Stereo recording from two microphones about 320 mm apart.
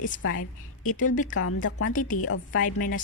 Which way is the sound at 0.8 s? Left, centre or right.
Left.